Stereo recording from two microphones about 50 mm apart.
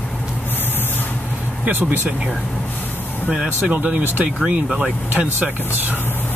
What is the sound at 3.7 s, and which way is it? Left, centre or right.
Speech, right.